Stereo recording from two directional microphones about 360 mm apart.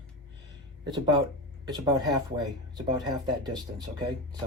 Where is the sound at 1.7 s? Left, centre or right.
Centre.